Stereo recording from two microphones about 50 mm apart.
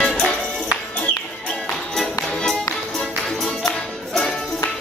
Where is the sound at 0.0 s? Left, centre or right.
Left.